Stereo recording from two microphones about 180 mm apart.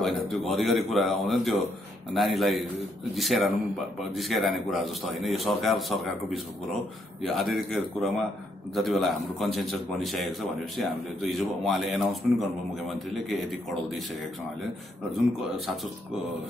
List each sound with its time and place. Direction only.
0.5 s a man's voice: centre (ahead or behind)
15.0 s a man's voice: centre (ahead or behind)